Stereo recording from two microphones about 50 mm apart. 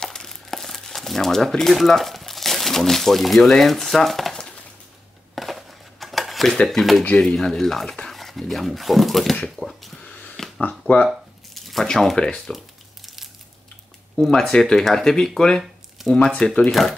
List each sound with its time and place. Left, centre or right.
0.0 s crumpling: centre
3.4 s speech: centre
5.3 s dishes: centre
6.7 s speech: centre
10.6 s speech: left
11.5 s a sound: centre
12.2 s speech: centre
12.5 s crumpling: centre
14.2 s speech: centre